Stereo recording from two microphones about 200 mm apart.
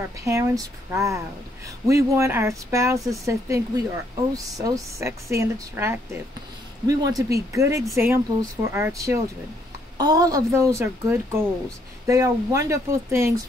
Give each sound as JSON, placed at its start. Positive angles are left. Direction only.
{"t": 0.2, "sound": "speech", "side_deg": -15}